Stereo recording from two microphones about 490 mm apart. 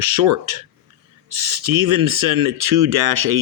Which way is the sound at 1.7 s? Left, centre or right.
Right.